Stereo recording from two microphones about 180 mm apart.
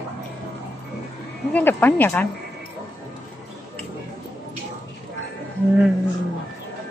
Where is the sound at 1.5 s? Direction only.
10° left (ahead or behind).